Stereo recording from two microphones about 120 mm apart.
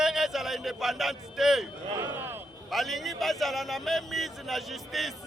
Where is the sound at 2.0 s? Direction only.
20° right (ahead or behind).